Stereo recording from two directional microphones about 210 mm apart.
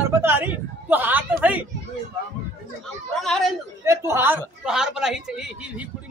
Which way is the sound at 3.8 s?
10° right (ahead or behind).